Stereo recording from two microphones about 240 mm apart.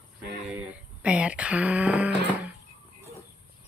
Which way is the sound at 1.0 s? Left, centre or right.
Centre.